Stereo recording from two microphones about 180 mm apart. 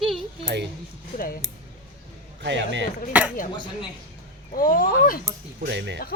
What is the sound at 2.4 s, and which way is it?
Speech, 80° right.